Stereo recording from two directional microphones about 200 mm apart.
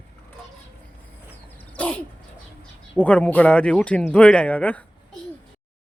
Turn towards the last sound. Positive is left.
turn(degrees=5)  # may be behind; listen again after turning